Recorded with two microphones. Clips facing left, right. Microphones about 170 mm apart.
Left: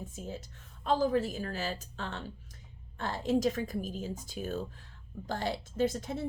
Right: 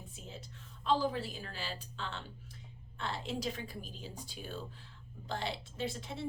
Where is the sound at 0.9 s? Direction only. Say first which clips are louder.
Left 4 dB; 45° left (ahead or behind).